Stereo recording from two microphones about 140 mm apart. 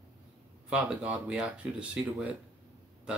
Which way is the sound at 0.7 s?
10° right (ahead or behind).